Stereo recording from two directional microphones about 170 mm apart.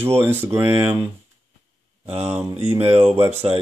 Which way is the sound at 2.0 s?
35° right (ahead or behind).